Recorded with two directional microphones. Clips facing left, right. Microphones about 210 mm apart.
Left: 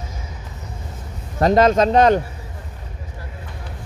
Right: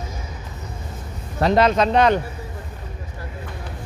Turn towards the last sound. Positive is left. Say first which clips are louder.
# left 3 dB
turn(degrees=40)  # may be behind; listen again after turning